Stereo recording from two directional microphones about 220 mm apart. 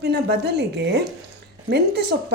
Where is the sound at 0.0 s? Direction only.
45° right (ahead or behind).